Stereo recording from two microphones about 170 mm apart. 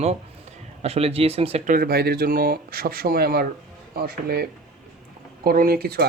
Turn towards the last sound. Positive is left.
turn(degrees=-65)  # may be behind; listen again after turning